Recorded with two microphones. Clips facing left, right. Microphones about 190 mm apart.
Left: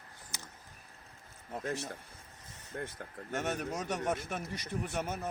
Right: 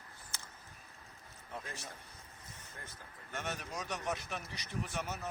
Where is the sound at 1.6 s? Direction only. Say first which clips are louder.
Left 11 dB; 70° left (ahead or behind).